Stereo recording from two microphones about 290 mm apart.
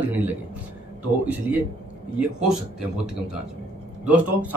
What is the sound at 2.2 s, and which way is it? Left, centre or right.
Speech, centre.